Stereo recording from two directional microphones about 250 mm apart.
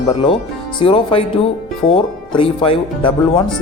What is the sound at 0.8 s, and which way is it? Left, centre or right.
Speech, left.